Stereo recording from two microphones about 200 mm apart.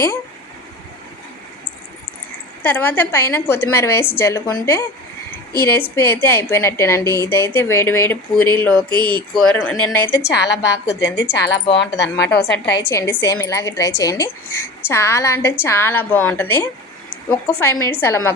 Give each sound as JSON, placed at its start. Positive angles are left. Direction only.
{"t": 2.6, "sound": "a woman's voice", "side_deg": 10}
{"t": 10.2, "sound": "a woman's voice", "side_deg": 55}
{"t": 11.4, "sound": "speech", "side_deg": 25}
{"t": 12.1, "sound": "a woman's voice", "side_deg": 55}
{"t": 12.9, "sound": "a woman's voice", "side_deg": 15}